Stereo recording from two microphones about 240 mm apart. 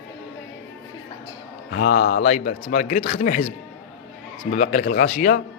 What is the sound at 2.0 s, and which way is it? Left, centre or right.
Speech, left.